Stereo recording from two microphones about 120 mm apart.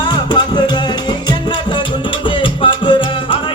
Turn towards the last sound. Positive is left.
turn(degrees=45)  # may be behind; listen again after turning